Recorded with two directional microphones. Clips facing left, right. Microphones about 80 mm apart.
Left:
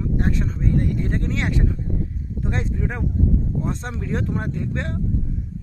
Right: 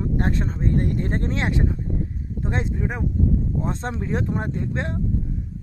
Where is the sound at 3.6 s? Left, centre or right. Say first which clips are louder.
Right 1 dB; right.